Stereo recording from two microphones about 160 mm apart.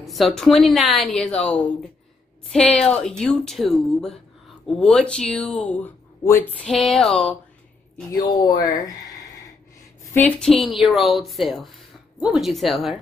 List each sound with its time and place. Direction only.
0.0 s speech: centre (ahead or behind)
6.2 s a sound: 15° left (ahead or behind)
6.7 s speech: centre (ahead or behind)
8.5 s speech: 25° left (ahead or behind)
10.1 s speech: 5° left (ahead or behind)